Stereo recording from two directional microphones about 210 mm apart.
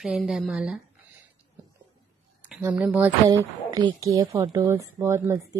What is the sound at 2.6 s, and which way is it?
A woman's voice, 5° right (ahead or behind).